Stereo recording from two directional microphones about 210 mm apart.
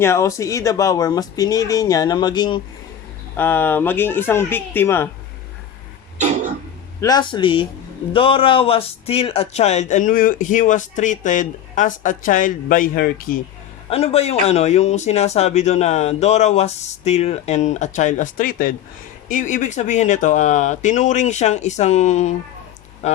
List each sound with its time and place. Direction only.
0.0 s speech: 15° left (ahead or behind)
3.3 s speech: 10° left (ahead or behind)
7.0 s speech: 20° left (ahead or behind); by 13.4 s 45° left (ahead or behind)
13.9 s speech: 30° left (ahead or behind)